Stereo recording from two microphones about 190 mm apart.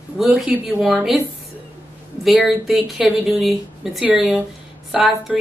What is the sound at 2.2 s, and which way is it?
A woman's voice, centre (ahead or behind).